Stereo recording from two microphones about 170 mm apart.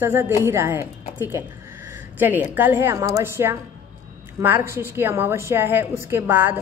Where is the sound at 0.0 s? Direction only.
15° right (ahead or behind).